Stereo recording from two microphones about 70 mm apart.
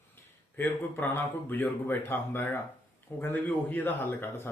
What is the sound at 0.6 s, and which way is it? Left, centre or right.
A man's voice, left.